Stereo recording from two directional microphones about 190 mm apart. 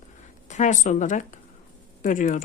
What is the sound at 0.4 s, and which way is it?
Speech, 40° left (ahead or behind).